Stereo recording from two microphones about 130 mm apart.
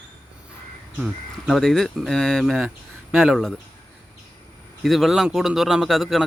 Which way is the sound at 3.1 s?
15° right (ahead or behind).